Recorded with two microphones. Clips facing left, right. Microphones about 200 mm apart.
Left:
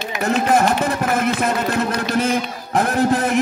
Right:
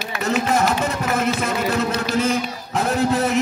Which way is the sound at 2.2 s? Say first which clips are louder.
Left 1 dB; 55° left (ahead or behind).